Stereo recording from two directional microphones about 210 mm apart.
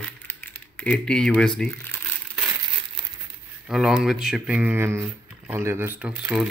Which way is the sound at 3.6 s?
Centre (ahead or behind).